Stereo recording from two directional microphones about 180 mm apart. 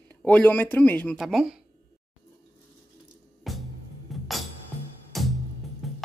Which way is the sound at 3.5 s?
Centre (ahead or behind).